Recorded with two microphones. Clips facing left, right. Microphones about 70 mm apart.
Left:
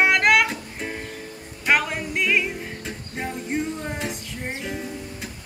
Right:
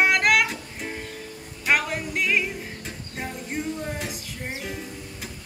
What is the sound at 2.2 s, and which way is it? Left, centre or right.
Music, centre.